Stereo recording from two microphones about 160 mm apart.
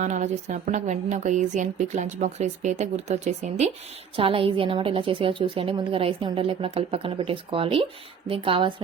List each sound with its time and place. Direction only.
0.0 s a woman's voice: 45° right (ahead or behind)